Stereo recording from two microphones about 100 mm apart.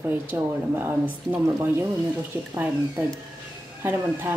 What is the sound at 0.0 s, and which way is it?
Speech, 20° right (ahead or behind).